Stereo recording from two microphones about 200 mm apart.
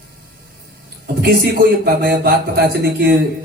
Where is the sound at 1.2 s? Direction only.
50° right (ahead or behind).